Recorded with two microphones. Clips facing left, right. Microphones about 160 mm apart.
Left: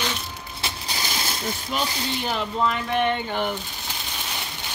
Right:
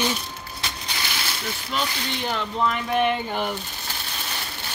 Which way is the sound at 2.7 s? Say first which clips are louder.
Right 1 dB; 5° right (ahead or behind).